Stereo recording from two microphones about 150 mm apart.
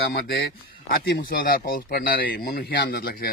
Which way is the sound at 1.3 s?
75° left (ahead or behind).